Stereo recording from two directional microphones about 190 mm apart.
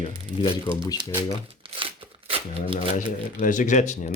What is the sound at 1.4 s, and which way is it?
Tearing, 30° right (ahead or behind).